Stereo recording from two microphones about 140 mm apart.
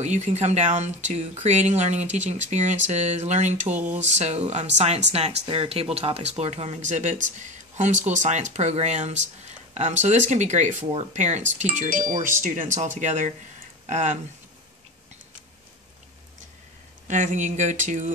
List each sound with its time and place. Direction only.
0.0 s speech: 55° right (ahead or behind)
17.1 s speech: 60° right (ahead or behind)